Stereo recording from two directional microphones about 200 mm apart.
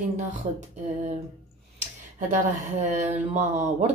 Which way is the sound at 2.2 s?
35° right (ahead or behind).